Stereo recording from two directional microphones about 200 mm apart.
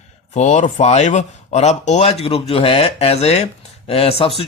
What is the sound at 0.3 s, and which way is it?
Speech, 35° left (ahead or behind).